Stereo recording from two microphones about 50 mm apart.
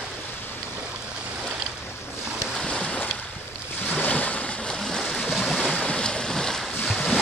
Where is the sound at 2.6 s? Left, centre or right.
Centre.